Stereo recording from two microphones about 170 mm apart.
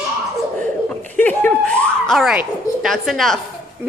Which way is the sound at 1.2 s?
10° left (ahead or behind).